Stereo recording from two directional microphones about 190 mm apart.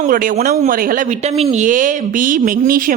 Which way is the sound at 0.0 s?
45° right (ahead or behind).